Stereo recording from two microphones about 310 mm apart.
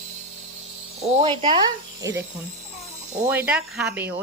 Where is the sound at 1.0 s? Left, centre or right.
Centre.